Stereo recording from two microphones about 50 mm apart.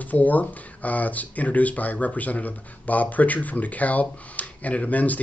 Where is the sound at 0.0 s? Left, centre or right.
Left.